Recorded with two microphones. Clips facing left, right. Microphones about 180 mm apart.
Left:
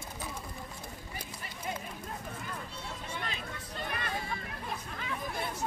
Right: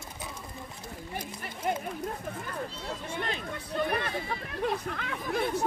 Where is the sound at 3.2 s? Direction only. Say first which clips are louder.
Right 6 dB; 60° right (ahead or behind).